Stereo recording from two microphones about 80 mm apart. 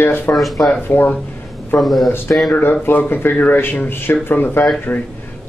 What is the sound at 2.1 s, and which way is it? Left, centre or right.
Speech, left.